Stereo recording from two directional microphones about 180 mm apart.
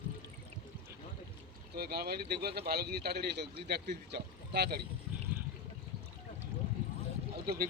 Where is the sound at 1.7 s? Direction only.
60° right (ahead or behind).